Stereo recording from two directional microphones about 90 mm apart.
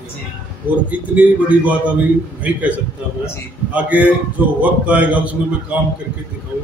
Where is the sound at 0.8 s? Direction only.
15° right (ahead or behind).